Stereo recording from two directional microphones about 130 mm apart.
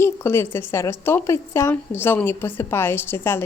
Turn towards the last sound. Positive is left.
turn(degrees=15)  # may be behind; listen again after turning